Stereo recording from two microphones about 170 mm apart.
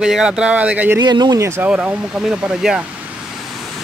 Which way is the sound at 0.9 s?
25° right (ahead or behind).